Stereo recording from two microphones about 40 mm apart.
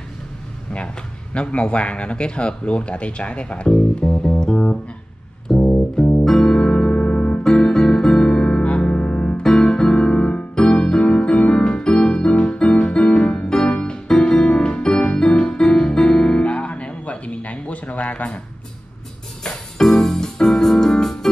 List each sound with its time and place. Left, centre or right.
1.3 s speech: left
5.5 s music: centre
7.4 s music: centre
9.4 s electric piano: centre
10.7 s piano: left
13.7 s music: left
16.4 s music: left
19.4 s keyboard: centre